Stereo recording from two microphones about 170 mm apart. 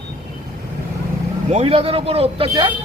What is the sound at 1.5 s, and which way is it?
A man's voice, 35° right (ahead or behind).